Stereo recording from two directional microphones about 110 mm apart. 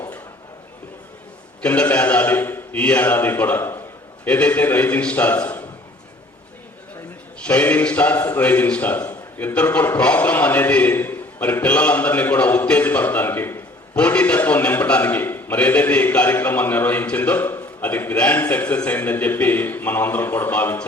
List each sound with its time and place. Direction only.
1.6 s a man's voice: 10° left (ahead or behind)
7.4 s a man's voice: 15° left (ahead or behind)